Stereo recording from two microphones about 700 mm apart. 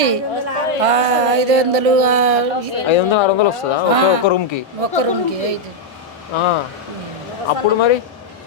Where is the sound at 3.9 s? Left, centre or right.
Right.